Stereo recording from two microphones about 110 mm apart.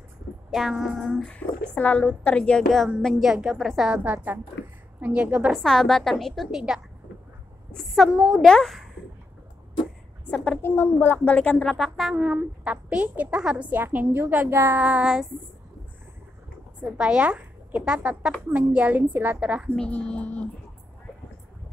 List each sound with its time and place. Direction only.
0.5 s a woman's voice: 5° right (ahead or behind)
5.6 s a woman's voice: 5° left (ahead or behind)
10.3 s a woman's voice: 10° left (ahead or behind)
10.6 s a woman's voice: 20° left (ahead or behind)
11.7 s a woman's voice: centre (ahead or behind)
12.2 s a woman's voice: 15° right (ahead or behind)
14.8 s a woman's voice: 10° right (ahead or behind)
16.8 s a woman's voice: 10° right (ahead or behind)
19.7 s a woman's voice: 10° left (ahead or behind)